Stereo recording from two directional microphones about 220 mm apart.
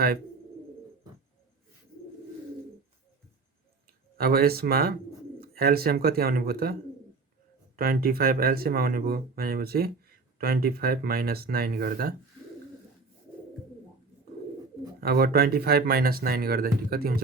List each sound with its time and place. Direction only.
4.2 s speech: 45° right (ahead or behind)
7.8 s speech: 40° right (ahead or behind)
15.0 s speech: 45° right (ahead or behind)